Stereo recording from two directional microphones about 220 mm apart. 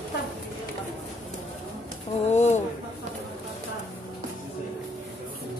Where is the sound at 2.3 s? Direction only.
30° left (ahead or behind).